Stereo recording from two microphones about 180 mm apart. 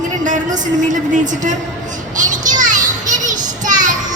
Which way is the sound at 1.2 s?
45° right (ahead or behind).